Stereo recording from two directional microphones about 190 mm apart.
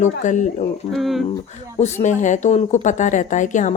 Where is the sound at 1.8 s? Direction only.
40° left (ahead or behind).